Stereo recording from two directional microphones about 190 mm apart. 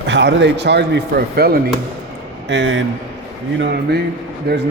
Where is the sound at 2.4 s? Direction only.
75° right (ahead or behind).